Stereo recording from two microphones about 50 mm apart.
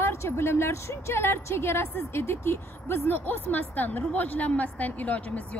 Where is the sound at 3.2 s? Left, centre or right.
Left.